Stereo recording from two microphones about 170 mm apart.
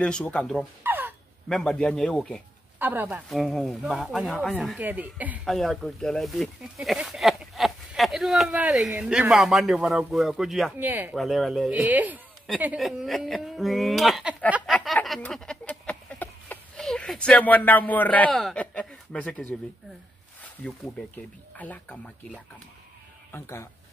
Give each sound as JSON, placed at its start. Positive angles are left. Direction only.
{"t": 0.0, "sound": "speech", "side_deg": 5}
{"t": 0.8, "sound": "a sound", "side_deg": -10}
{"t": 1.5, "sound": "speech", "side_deg": 0}
{"t": 2.8, "sound": "speech", "side_deg": -10}
{"t": 3.3, "sound": "speech", "side_deg": 0}
{"t": 4.7, "sound": "speech", "side_deg": -10}
{"t": 5.4, "sound": "speech", "side_deg": 0}
{"t": 11.1, "sound": "speech", "side_deg": 0}
{"t": 21.5, "sound": "speech", "side_deg": 10}